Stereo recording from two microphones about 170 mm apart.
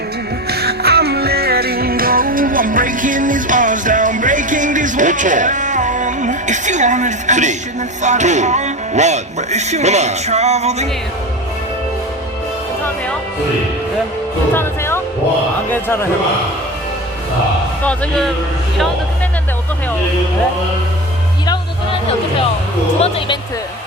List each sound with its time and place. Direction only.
0.5 s music: 70° right (ahead or behind); by 7.5 s 45° right (ahead or behind)
8.0 s speech: 45° right (ahead or behind)
14.5 s speech: 15° left (ahead or behind)
17.8 s speech: 10° left (ahead or behind)
23.0 s speech: 35° left (ahead or behind)